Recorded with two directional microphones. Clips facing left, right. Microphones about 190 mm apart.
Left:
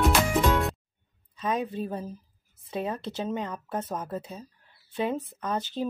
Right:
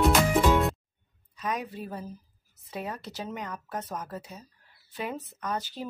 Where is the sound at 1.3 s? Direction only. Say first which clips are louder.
Left 4 dB; 25° left (ahead or behind).